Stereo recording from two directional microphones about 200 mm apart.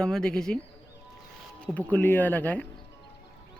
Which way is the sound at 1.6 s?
10° left (ahead or behind).